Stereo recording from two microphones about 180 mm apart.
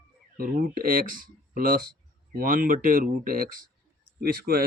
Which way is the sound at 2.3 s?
50° right (ahead or behind).